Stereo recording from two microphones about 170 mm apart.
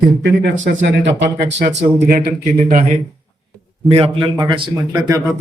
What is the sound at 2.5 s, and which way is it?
Speech, 45° right (ahead or behind).